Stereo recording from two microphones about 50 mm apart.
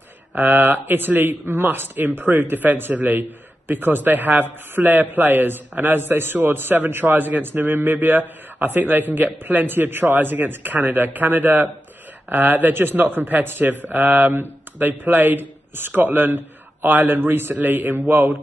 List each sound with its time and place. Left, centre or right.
0.3 s a man's voice: right